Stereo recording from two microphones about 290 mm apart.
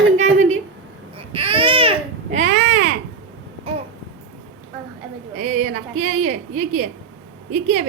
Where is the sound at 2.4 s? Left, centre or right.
Right.